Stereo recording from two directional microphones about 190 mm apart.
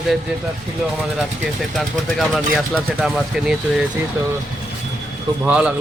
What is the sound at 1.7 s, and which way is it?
Speech, centre (ahead or behind).